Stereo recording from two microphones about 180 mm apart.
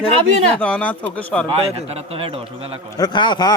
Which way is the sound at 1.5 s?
35° right (ahead or behind).